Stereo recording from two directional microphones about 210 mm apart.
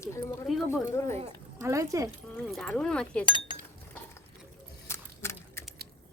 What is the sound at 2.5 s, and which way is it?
Speech, 5° left (ahead or behind).